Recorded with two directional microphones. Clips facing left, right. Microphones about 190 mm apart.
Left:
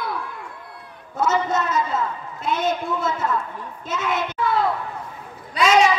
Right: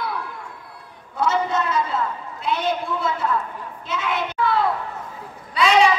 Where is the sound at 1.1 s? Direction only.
45° left (ahead or behind).